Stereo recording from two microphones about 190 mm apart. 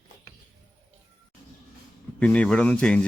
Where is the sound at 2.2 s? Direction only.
5° left (ahead or behind).